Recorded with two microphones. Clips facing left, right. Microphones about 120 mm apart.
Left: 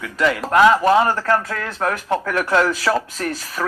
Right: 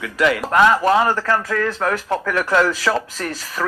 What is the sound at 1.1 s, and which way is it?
Speech, 40° left (ahead or behind).